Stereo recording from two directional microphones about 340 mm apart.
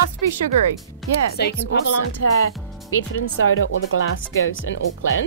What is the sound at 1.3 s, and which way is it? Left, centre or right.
Speech, left.